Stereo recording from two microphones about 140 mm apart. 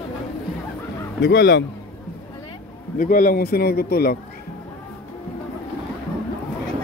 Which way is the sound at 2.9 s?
75° left (ahead or behind).